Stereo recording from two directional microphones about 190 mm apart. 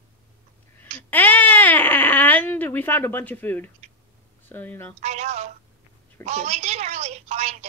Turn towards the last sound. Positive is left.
turn(degrees=-35)  # may be behind; listen again after turning